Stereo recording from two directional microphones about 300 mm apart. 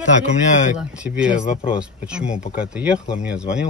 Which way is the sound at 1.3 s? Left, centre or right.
Left.